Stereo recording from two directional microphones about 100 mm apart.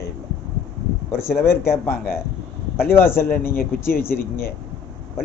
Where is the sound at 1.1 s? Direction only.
25° left (ahead or behind).